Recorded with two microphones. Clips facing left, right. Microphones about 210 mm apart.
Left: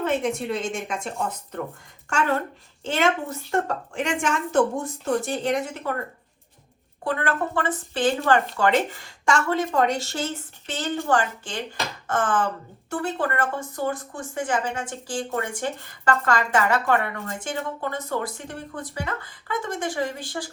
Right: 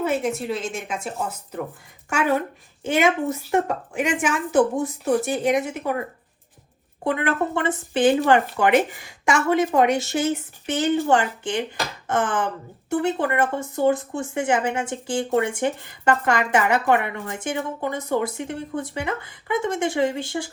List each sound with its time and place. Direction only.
0.0 s a woman's voice: 5° right (ahead or behind); by 20.5 s 25° right (ahead or behind)